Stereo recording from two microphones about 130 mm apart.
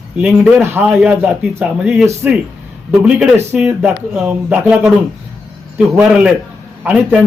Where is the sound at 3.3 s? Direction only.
10° right (ahead or behind).